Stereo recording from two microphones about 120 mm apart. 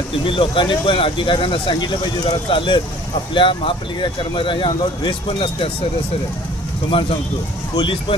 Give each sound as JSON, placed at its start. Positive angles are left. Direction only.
{"t": 0.2, "sound": "speech", "side_deg": 45}
{"t": 6.9, "sound": "speech", "side_deg": 50}